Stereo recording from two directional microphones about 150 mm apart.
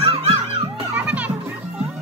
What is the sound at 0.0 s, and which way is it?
Music, 40° right (ahead or behind).